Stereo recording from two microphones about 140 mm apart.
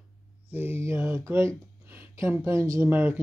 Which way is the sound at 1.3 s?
20° right (ahead or behind).